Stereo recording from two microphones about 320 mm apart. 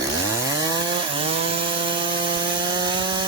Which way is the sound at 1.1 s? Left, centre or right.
Centre.